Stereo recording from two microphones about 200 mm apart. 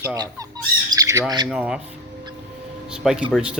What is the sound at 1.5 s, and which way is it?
Speech, 5° right (ahead or behind).